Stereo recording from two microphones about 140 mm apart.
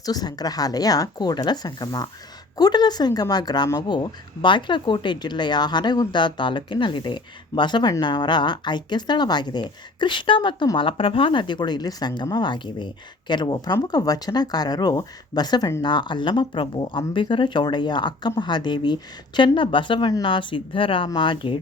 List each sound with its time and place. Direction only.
0.0 s speech: 30° left (ahead or behind)